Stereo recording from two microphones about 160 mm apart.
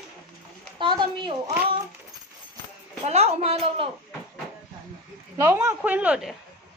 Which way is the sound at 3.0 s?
40° right (ahead or behind).